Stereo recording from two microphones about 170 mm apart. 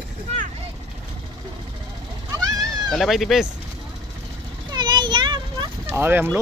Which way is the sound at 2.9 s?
Centre (ahead or behind).